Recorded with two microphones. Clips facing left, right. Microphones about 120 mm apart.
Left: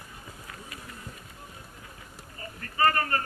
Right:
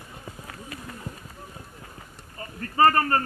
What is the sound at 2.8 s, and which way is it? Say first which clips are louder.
Speech: right 6 dB; 40° right (ahead or behind).